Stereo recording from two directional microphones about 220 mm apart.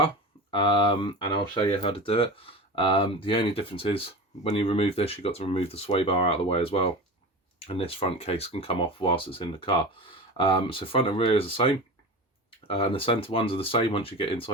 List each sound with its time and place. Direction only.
0.5 s speech: 25° left (ahead or behind)
12.7 s speech: 25° left (ahead or behind)